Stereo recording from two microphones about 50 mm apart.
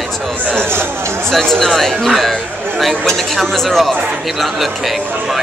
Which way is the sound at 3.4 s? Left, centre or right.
Centre.